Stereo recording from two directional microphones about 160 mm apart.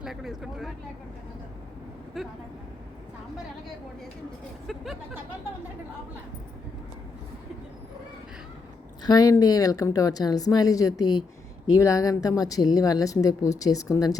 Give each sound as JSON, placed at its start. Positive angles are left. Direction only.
{"t": 0.0, "sound": "speech", "side_deg": 0}
{"t": 2.2, "sound": "speech", "side_deg": 0}
{"t": 4.6, "sound": "speech", "side_deg": 0}
{"t": 9.0, "sound": "a woman's voice", "side_deg": 25}